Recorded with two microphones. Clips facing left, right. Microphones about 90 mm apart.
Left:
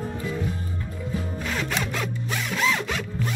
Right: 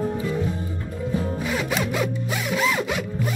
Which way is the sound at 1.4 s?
5° right (ahead or behind).